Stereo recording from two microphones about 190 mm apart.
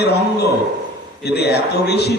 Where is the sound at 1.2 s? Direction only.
60° left (ahead or behind).